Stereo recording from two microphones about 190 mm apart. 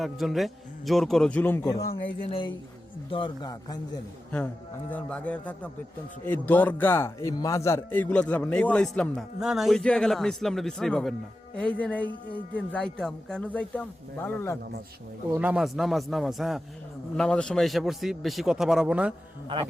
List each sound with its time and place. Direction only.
0.0 s speech: centre (ahead or behind)
3.1 s a man's voice: 25° left (ahead or behind)
4.9 s a man's voice: 5° left (ahead or behind)
15.3 s speech: 10° right (ahead or behind)